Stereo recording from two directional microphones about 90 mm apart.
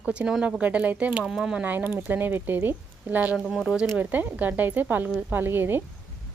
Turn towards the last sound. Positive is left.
turn(degrees=-25)  # may be behind; listen again after turning